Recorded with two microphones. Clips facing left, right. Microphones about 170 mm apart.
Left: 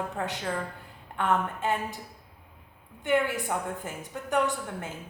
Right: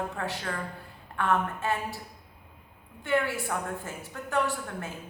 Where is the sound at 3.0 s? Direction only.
20° left (ahead or behind).